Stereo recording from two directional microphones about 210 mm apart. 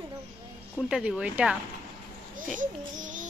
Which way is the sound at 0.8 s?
5° right (ahead or behind).